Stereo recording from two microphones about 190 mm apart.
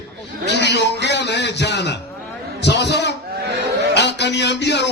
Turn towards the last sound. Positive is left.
turn(degrees=65)  # may be behind; listen again after turning